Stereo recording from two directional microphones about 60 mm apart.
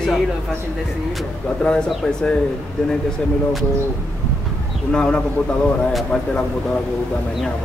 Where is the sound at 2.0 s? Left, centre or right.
Centre.